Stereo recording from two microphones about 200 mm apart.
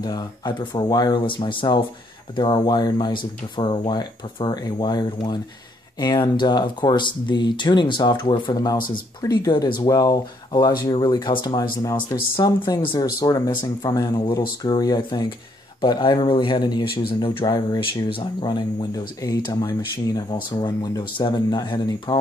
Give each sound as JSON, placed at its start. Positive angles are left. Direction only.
{"t": 0.0, "sound": "speech", "side_deg": 20}
{"t": 8.7, "sound": "speech", "side_deg": 45}
{"t": 9.2, "sound": "a man's voice", "side_deg": 20}